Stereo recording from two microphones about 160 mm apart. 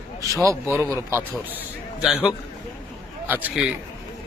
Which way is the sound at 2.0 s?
Centre (ahead or behind).